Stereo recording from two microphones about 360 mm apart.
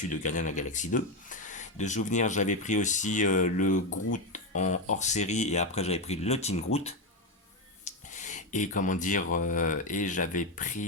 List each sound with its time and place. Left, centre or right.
0.1 s speech: left
7.9 s a sound: centre
9.3 s speech: left